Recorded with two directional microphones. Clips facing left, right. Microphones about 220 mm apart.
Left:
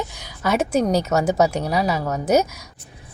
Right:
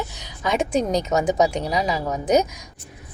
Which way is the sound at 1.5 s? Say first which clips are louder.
Left 2 dB; 5° left (ahead or behind).